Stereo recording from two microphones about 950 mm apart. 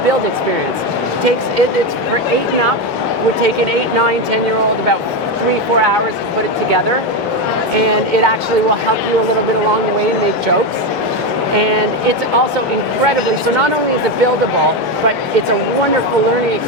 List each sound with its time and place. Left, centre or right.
7.8 s speech: right
11.5 s speech: right